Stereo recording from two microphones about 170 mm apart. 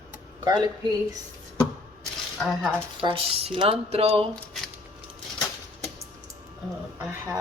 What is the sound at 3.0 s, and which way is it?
A woman's voice, 35° right (ahead or behind).